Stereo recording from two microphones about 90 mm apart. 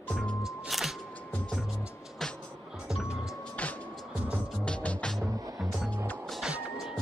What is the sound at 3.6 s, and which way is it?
Music, 15° left (ahead or behind).